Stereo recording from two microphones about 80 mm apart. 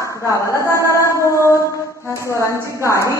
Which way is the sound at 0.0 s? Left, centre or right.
Left.